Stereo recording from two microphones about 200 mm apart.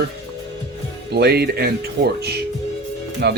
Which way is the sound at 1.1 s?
55° right (ahead or behind).